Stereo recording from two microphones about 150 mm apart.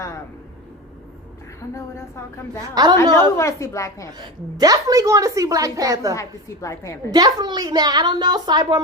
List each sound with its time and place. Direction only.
1.7 s a woman's voice: 20° left (ahead or behind)
2.7 s a woman's voice: 25° right (ahead or behind)
3.3 s a woman's voice: 20° left (ahead or behind)
4.2 s a woman's voice: 25° right (ahead or behind)
6.1 s a woman's voice: 20° left (ahead or behind)
7.1 s a woman's voice: 25° right (ahead or behind)